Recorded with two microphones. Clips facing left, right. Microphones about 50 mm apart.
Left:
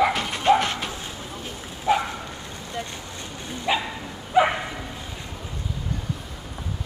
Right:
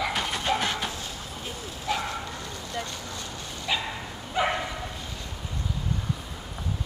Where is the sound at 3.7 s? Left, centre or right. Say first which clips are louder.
Left 5 dB; left.